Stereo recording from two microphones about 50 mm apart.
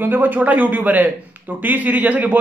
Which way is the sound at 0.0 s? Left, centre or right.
Right.